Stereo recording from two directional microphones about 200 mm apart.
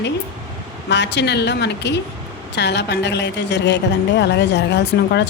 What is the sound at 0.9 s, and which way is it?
A woman's voice, 60° left (ahead or behind).